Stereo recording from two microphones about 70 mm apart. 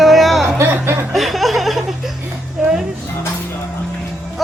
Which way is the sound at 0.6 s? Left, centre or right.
Right.